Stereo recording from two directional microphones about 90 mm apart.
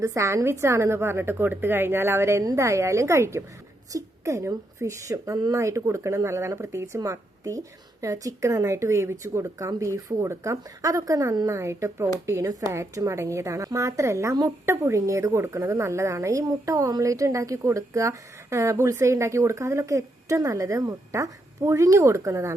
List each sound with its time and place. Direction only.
0.0 s a woman's voice: 35° right (ahead or behind)